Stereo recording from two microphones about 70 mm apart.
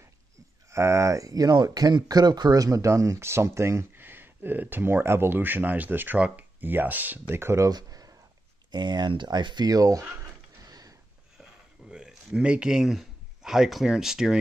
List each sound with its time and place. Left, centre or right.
0.7 s speech: right
3.9 s speech: right
6.1 s speech: centre
6.6 s speech: right
7.3 s speech: right
7.7 s a sound: right
8.7 s speech: right
10.6 s mechanisms: right
11.9 s speech: centre